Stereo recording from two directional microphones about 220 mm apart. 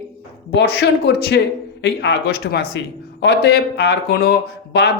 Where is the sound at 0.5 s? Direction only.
50° left (ahead or behind).